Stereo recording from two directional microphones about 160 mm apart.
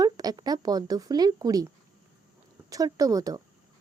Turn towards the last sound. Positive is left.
turn(degrees=-20)  # may be behind; listen again after turning